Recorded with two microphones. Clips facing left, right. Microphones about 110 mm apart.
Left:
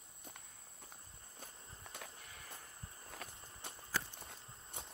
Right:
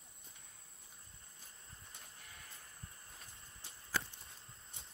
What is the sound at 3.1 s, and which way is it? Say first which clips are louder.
Walk: left 7 dB; 70° left (ahead or behind).